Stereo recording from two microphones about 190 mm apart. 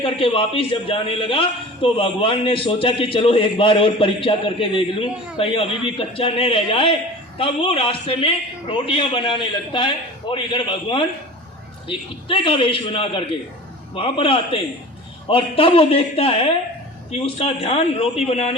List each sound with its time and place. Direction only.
0.0 s a man's voice: 30° left (ahead or behind)